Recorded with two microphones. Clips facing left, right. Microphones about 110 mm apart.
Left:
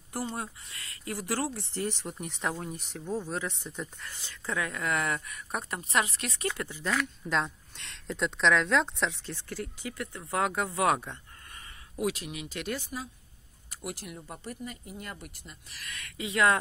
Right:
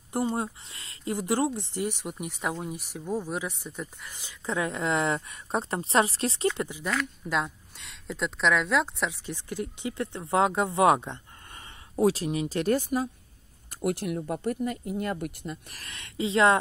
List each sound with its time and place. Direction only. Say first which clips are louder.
0.1 s speech: right 7 dB; 25° right (ahead or behind); by 3.9 s 5° right (ahead or behind)
4.0 s speech: right 2 dB; 15° right (ahead or behind)
6.9 s speech: left 1 dB; centre (ahead or behind); by 11.1 s 20° right (ahead or behind)
11.9 s speech: right 8 dB; 35° right (ahead or behind); by 15.6 s 60° right (ahead or behind)
15.9 s speech: right 7 dB; 30° right (ahead or behind)